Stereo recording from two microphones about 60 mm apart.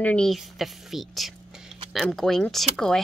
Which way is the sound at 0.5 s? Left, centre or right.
Centre.